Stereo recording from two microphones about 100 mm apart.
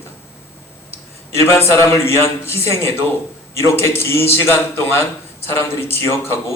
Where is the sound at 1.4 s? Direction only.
25° left (ahead or behind).